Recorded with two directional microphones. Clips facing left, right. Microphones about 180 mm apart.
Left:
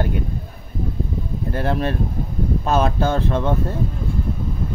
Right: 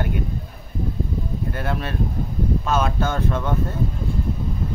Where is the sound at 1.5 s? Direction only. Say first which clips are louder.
Left 8 dB; 35° left (ahead or behind).